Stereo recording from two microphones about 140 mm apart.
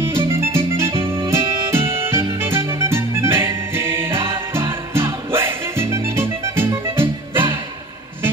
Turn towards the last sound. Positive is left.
turn(degrees=-15)  # may be behind; listen again after turning